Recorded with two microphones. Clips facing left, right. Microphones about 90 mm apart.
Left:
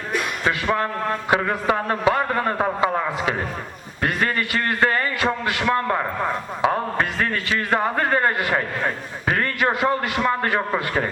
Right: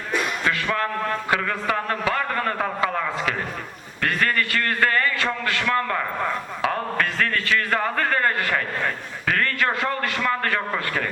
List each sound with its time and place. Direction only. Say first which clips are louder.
0.4 s a man's voice: left 2 dB; 20° left (ahead or behind)